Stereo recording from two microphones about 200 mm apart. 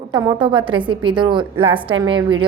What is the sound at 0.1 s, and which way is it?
A woman's voice, 20° right (ahead or behind).